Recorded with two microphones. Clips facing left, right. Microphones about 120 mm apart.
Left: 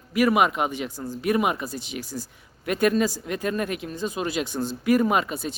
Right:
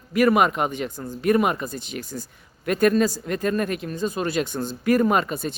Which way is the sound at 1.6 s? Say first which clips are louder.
Right 1 dB; 50° right (ahead or behind).